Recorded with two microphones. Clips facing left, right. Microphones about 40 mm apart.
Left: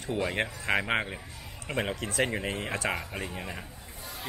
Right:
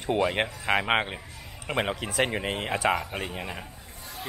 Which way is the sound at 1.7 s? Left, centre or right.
Right.